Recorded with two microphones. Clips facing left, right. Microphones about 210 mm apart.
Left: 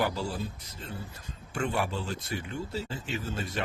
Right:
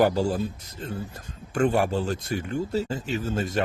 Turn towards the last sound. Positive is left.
turn(degrees=-45)  # may be behind; listen again after turning